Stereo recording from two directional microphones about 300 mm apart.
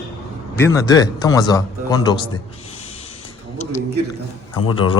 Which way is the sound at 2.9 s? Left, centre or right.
Left.